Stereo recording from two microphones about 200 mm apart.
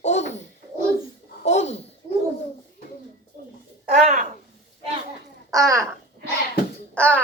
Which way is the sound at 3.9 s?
40° right (ahead or behind).